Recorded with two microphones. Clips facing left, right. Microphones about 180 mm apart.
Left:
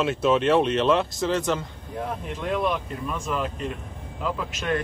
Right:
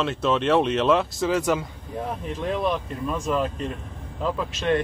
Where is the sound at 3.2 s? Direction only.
35° right (ahead or behind).